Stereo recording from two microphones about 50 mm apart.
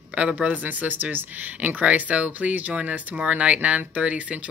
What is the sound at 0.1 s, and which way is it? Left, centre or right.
Speech, right.